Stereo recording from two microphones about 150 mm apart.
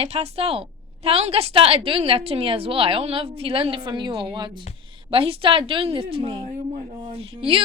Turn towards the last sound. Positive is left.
turn(degrees=-40)  # may be behind; listen again after turning